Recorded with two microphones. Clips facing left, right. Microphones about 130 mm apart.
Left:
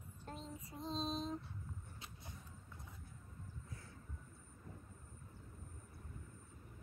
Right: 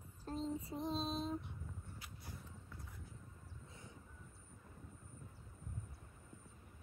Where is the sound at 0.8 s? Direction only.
5° right (ahead or behind).